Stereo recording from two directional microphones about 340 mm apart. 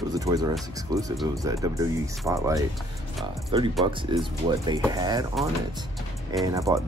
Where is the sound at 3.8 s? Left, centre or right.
Centre.